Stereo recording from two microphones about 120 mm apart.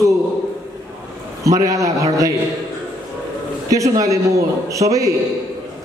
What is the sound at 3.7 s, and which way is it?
A man's voice, 25° right (ahead or behind).